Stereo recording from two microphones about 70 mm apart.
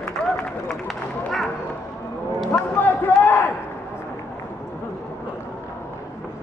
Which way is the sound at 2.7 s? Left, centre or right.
Left.